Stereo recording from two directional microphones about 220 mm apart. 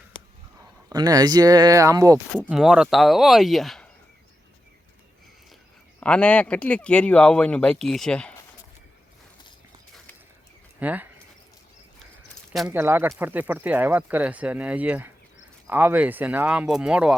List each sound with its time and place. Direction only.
0.9 s speech: 15° right (ahead or behind)
2.5 s speech: 5° right (ahead or behind)
6.0 s speech: 5° left (ahead or behind)
10.8 s speech: 5° right (ahead or behind)
12.5 s speech: 5° right (ahead or behind)